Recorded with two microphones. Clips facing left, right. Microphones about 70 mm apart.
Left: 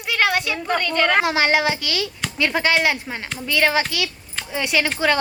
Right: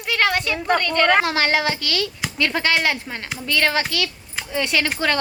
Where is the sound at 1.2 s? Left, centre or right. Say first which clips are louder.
Left 2 dB; centre.